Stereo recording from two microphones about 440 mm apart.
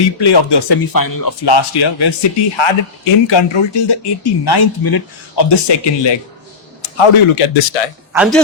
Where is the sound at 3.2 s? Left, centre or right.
Left.